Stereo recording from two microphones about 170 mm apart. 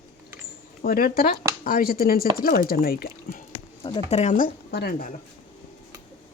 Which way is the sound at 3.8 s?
35° left (ahead or behind).